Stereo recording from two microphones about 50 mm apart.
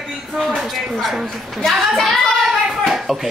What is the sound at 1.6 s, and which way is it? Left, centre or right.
Speech, centre.